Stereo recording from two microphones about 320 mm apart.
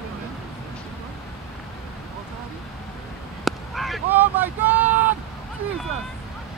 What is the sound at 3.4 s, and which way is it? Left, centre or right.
Vehicle, centre.